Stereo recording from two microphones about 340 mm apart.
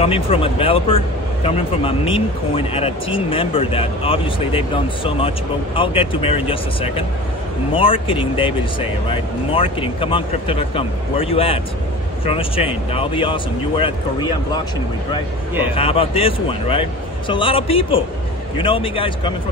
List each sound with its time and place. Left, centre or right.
0.0 s speech: centre
15.7 s speech: centre